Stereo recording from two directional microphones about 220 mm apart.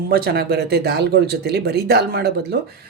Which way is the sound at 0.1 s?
45° right (ahead or behind).